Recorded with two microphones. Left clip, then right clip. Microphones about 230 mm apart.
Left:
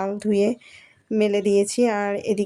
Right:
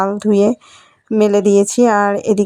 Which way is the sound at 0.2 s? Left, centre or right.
Right.